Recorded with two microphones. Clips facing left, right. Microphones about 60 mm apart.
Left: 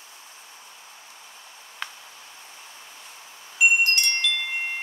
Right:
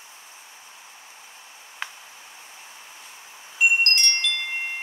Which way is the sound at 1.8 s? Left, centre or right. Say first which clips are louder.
Right 1 dB; centre.